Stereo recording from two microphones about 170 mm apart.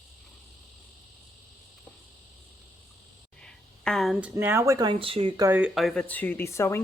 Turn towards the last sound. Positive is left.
turn(degrees=15)  # may be behind; listen again after turning